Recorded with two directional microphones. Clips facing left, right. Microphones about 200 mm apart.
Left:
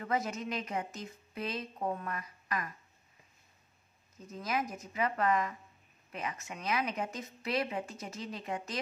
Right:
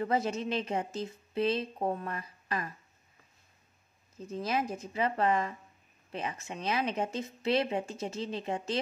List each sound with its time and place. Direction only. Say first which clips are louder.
0.0 s a woman's voice: right 4 dB; 30° right (ahead or behind)
4.2 s a woman's voice: right 3 dB; 30° right (ahead or behind)